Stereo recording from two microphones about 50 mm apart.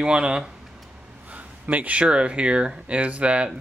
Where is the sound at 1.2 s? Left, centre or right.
Right.